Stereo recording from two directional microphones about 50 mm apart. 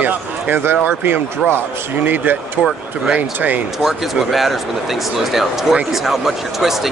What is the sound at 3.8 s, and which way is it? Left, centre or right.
Speech, centre.